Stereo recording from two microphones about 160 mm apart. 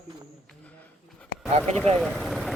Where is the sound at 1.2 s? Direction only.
5° left (ahead or behind).